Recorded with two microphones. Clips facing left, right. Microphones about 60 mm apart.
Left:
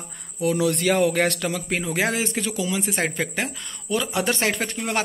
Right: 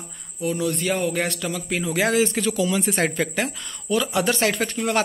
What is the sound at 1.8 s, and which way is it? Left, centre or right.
Speech, left.